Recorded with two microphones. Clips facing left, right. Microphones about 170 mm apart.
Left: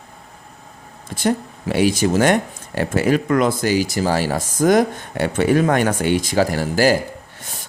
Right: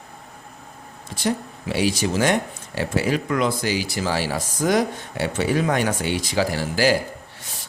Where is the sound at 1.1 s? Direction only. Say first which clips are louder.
Left 4 dB; 50° left (ahead or behind).